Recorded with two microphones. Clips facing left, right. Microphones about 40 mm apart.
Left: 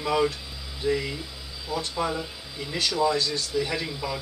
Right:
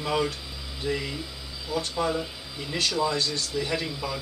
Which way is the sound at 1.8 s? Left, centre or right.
Centre.